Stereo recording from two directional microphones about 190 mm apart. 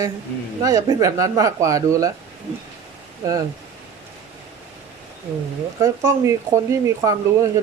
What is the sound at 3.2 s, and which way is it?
Speech, 15° right (ahead or behind).